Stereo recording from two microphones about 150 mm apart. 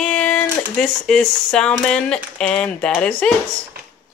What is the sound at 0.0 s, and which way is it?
A woman's voice, 10° left (ahead or behind).